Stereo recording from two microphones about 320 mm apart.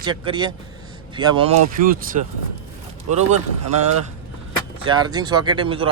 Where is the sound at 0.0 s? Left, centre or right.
Centre.